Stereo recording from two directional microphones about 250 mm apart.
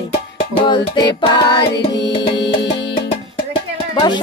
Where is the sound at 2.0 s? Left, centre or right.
Left.